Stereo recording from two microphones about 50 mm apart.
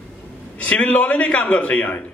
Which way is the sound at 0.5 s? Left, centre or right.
Left.